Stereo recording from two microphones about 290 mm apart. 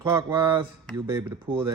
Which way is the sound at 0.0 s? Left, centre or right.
Centre.